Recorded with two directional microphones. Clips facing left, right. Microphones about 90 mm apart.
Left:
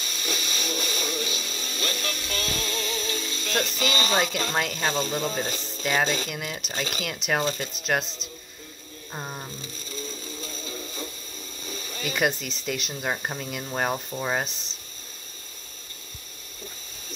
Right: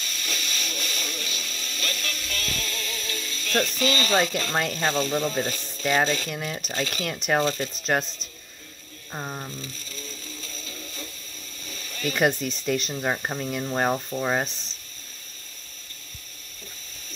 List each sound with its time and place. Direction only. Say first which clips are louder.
0.0 s vehicle: left 2 dB; 15° left (ahead or behind)
3.8 s speech: right 1 dB; 20° left (ahead or behind)
9.1 s speech: right 2 dB; 10° right (ahead or behind)
9.6 s music: left 2 dB; 20° left (ahead or behind)
11.6 s speech: right 2 dB; 20° left (ahead or behind); by 14.5 s 5° right (ahead or behind)